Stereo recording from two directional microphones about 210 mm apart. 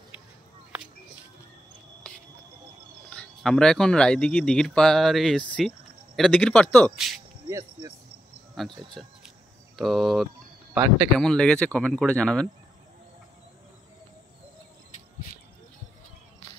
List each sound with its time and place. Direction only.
3.1 s speech: 5° left (ahead or behind)
7.4 s speech: 15° right (ahead or behind)
8.5 s speech: centre (ahead or behind)